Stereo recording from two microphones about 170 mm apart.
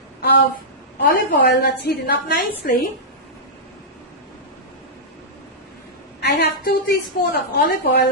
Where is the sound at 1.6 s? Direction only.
60° left (ahead or behind).